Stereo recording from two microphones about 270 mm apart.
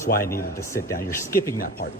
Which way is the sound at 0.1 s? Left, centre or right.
Left.